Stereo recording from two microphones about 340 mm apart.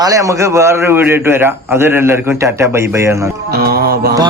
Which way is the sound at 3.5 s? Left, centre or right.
Right.